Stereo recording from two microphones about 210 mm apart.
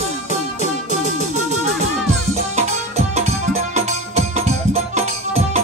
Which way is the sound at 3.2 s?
30° right (ahead or behind).